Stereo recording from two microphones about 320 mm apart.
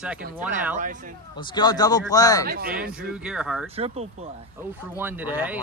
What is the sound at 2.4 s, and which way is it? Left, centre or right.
Speech, right.